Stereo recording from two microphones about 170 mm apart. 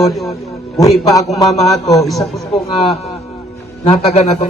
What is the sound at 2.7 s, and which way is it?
A man's voice, 35° left (ahead or behind).